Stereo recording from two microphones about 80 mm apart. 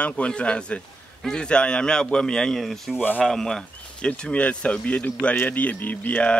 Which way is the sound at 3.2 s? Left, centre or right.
Centre.